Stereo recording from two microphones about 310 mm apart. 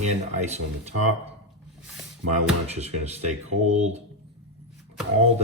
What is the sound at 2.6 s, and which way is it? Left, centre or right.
Speech, right.